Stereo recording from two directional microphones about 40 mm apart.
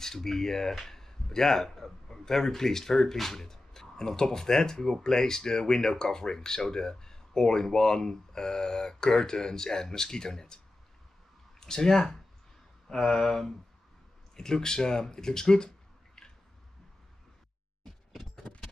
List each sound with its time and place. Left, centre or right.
0.0 s speech: centre
11.6 s speech: centre